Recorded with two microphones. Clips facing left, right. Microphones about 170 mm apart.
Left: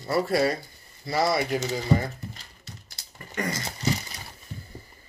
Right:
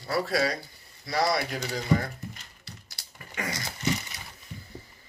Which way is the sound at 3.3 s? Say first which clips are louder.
Left 4 dB; 5° left (ahead or behind).